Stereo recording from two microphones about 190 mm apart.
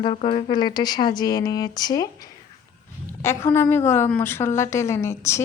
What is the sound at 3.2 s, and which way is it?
A woman's voice, 15° left (ahead or behind).